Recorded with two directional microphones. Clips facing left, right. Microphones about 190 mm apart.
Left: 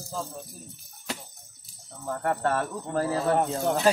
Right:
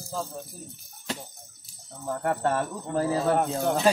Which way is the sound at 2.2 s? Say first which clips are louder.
Even; 10° right (ahead or behind).